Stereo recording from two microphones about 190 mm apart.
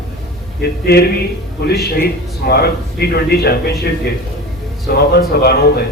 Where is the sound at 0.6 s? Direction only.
55° left (ahead or behind).